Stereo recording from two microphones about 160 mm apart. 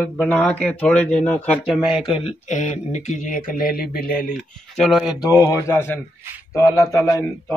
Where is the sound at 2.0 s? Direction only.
35° left (ahead or behind); by 4.3 s 65° left (ahead or behind).